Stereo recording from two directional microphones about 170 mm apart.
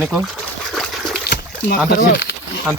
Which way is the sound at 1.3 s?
70° left (ahead or behind).